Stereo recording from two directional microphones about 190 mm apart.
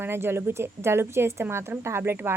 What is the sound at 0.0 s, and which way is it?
A woman's voice, 10° right (ahead or behind).